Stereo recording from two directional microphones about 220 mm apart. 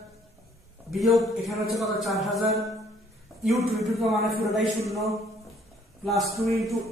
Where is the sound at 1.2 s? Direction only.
Centre (ahead or behind).